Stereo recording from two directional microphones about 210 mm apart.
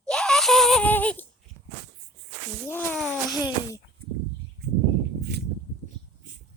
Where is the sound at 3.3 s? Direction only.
15° left (ahead or behind).